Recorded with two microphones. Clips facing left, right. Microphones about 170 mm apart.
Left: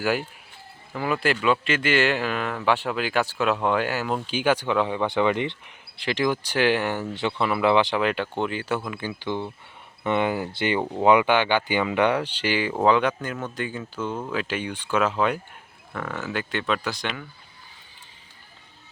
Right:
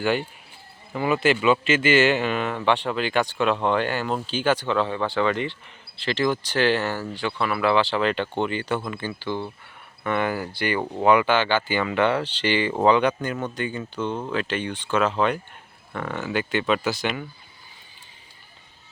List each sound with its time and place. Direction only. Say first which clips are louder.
0.0 s speech: right 1 dB; 5° left (ahead or behind)